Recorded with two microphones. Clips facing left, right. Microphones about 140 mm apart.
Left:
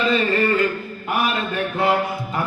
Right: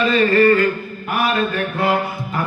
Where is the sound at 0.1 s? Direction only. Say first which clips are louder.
Right 8 dB; 20° left (ahead or behind).